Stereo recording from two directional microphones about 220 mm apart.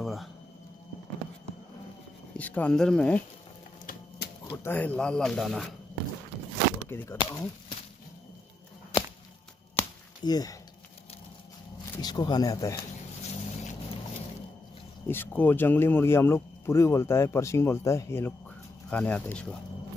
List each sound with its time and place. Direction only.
0.0 s a sound: centre (ahead or behind)
2.3 s speech: 5° left (ahead or behind)
4.6 s speech: 5° left (ahead or behind)
6.9 s speech: 10° left (ahead or behind)
7.2 s speech: 20° left (ahead or behind)
9.8 s a sound: 15° left (ahead or behind)
12.0 s speech: 20° left (ahead or behind)
13.2 s vehicle: 30° left (ahead or behind)
15.0 s speech: 10° left (ahead or behind)